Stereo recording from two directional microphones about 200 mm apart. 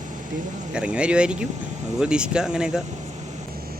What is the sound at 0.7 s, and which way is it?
A man's voice, 5° right (ahead or behind).